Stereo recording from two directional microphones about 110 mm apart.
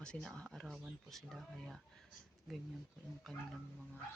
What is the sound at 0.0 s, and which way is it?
Speech, 10° left (ahead or behind).